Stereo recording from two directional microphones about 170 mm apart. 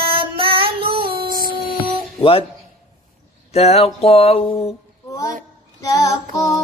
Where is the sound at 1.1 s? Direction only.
55° right (ahead or behind).